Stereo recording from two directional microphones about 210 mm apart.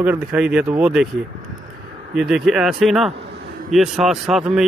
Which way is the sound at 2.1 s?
Centre (ahead or behind).